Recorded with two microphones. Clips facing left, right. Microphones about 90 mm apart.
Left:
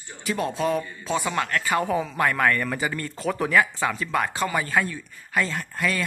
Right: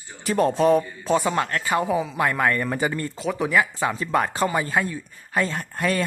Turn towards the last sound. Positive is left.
turn(degrees=-40)  # may be behind; listen again after turning